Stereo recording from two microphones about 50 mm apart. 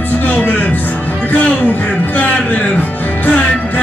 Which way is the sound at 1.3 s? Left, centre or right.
Left.